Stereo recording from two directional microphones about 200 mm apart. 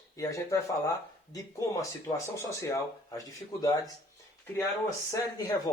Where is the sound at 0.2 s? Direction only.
15° left (ahead or behind).